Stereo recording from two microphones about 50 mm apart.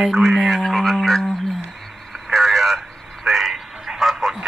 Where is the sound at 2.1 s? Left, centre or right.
Centre.